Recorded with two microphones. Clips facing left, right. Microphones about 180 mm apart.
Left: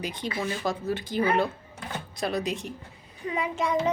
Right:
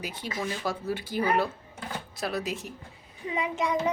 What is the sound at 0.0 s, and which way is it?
A child's voice, 5° right (ahead or behind).